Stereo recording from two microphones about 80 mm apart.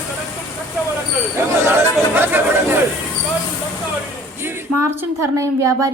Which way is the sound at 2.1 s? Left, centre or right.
Right.